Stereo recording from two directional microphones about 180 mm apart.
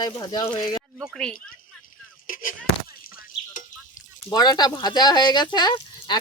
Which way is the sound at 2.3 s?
50° left (ahead or behind).